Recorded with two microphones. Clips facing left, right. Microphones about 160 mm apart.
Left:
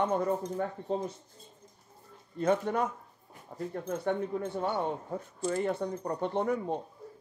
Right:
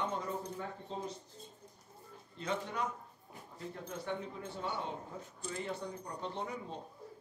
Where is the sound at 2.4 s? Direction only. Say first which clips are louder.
Left 10 dB; 50° left (ahead or behind).